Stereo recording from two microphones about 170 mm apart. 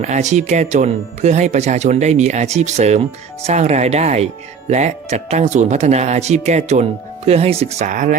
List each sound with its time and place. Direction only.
0.0 s speech: 45° right (ahead or behind)